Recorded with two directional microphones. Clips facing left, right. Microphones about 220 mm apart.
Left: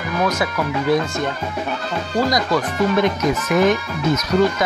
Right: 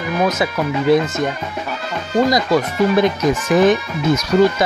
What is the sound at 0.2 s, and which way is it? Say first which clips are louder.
Speech: right 2 dB; 25° right (ahead or behind).